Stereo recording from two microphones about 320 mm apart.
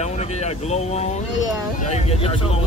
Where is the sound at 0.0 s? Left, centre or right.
Centre.